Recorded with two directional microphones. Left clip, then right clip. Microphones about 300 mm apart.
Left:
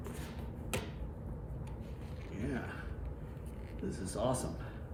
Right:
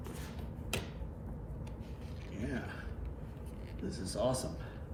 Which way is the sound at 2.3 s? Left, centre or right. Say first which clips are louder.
Left 1 dB; centre.